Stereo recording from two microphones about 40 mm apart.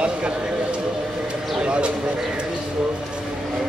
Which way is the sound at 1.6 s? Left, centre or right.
Right.